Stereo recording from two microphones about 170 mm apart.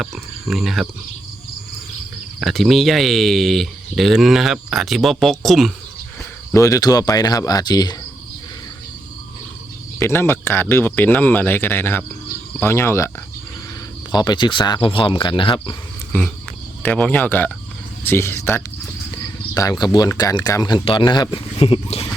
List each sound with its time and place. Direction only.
0.0 s speech: centre (ahead or behind)
2.4 s speech: centre (ahead or behind)
6.5 s speech: 20° left (ahead or behind)
10.0 s speech: 15° left (ahead or behind)
14.1 s speech: 25° left (ahead or behind)
16.8 s speech: 10° left (ahead or behind); by 22.1 s 35° left (ahead or behind)